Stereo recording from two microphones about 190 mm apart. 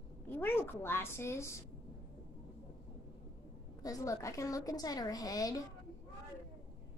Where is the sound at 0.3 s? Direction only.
10° left (ahead or behind).